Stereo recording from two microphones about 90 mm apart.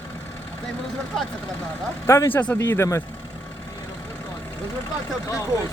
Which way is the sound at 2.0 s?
30° left (ahead or behind).